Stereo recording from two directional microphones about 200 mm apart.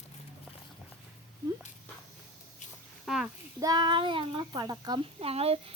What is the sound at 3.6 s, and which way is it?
Speech, 20° right (ahead or behind).